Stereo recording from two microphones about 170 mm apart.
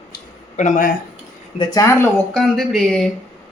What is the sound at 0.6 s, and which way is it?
Speech, 50° left (ahead or behind).